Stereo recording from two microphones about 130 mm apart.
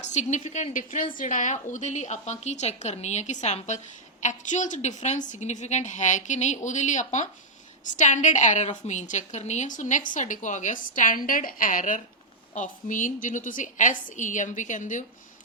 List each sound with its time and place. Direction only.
0.1 s a woman's voice: 65° left (ahead or behind); by 12.0 s 90° left
12.5 s a woman's voice: 80° left